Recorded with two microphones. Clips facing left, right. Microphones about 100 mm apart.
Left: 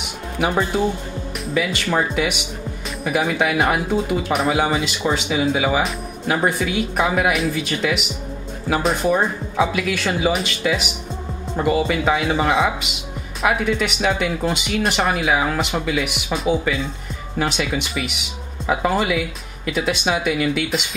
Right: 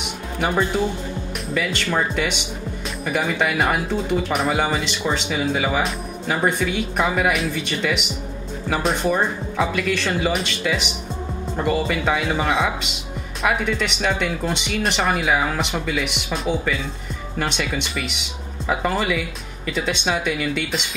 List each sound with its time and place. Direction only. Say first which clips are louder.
1.4 s speech: left 3 dB; 5° left (ahead or behind)